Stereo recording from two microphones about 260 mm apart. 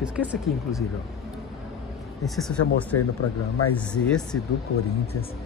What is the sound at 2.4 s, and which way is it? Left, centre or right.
Speech, centre.